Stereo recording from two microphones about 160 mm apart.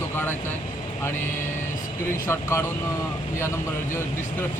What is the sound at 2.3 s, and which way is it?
Speech, 15° left (ahead or behind).